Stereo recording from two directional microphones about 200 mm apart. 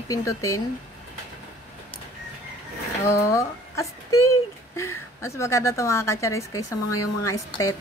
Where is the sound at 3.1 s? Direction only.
15° left (ahead or behind).